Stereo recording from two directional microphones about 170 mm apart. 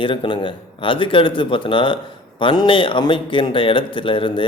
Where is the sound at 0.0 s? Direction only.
30° left (ahead or behind).